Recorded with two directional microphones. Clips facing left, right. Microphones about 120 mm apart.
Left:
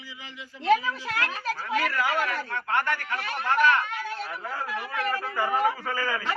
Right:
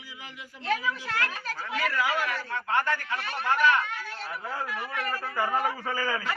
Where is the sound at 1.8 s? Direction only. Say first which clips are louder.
Right 3 dB; centre (ahead or behind).